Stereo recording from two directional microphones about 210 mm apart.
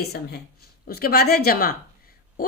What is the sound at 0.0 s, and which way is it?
A woman's voice, 50° left (ahead or behind).